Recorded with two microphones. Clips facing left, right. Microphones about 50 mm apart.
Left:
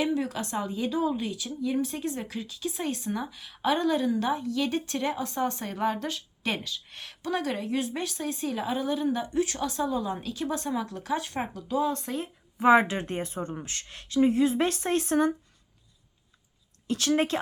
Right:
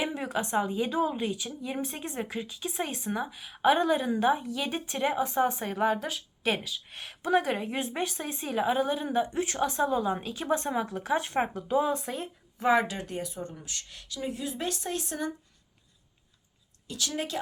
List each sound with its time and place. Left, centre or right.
0.0 s a woman's voice: right; by 7.2 s centre
7.2 s speech: right; by 12.3 s centre
12.5 s speech: left
16.8 s speech: left